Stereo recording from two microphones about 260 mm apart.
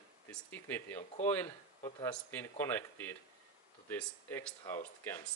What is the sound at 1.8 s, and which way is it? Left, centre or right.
Speech, centre.